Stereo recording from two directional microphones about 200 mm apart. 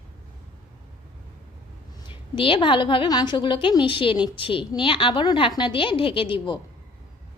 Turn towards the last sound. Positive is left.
turn(degrees=25)  # may be behind; listen again after turning